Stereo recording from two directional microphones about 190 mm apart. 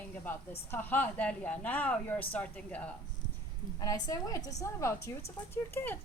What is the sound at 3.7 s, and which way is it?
A woman's voice, 20° left (ahead or behind).